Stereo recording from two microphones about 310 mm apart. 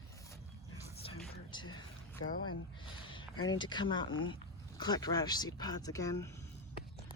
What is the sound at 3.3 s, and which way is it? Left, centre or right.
Speech, left.